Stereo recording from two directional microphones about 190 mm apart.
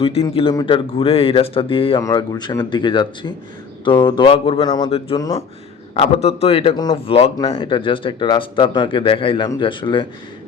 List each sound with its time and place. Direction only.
0.0 s a man's voice: 30° left (ahead or behind)
2.0 s speech: 20° left (ahead or behind)
5.9 s a man's voice: 35° left (ahead or behind)